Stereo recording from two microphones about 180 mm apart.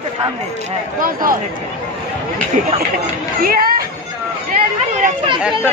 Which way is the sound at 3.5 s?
55° right (ahead or behind).